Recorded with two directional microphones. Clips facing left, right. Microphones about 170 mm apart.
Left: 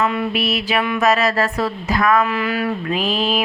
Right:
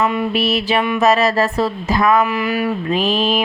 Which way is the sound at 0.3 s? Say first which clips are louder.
Right 3 dB; 30° right (ahead or behind).